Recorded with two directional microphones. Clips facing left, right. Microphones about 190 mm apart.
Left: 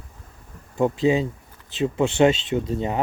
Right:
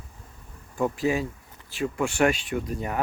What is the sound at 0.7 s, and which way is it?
Speech, 25° left (ahead or behind).